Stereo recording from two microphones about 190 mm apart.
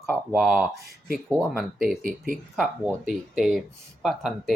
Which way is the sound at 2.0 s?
45° right (ahead or behind).